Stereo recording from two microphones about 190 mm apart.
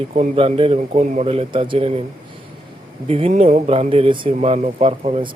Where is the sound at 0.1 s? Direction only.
30° right (ahead or behind).